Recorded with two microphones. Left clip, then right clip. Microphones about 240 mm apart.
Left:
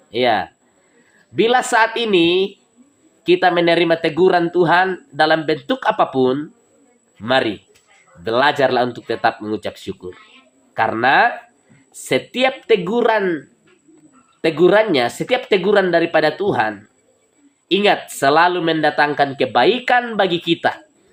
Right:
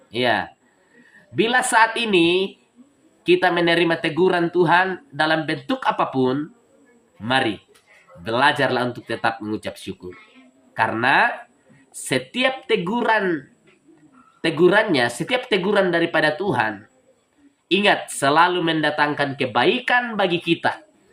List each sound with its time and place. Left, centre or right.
0.1 s speech: centre
7.2 s speech: centre
14.6 s speech: centre